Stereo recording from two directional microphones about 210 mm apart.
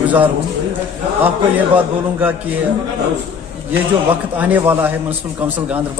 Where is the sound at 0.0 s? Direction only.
5° right (ahead or behind).